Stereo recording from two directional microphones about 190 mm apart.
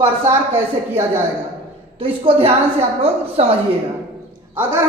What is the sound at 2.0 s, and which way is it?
A woman's voice, 30° right (ahead or behind).